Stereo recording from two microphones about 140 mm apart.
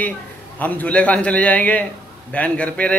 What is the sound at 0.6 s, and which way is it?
A man's voice, 10° left (ahead or behind).